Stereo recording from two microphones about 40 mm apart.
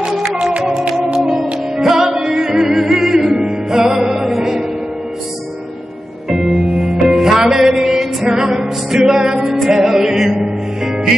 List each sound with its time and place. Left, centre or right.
0.4 s music: right; by 4.5 s centre
6.2 s music: centre
7.5 s a sound: centre
8.3 s music: centre